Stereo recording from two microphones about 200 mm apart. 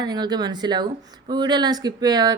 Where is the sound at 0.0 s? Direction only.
20° right (ahead or behind).